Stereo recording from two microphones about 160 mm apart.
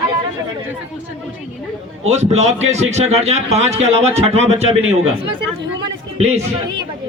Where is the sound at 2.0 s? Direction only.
45° right (ahead or behind).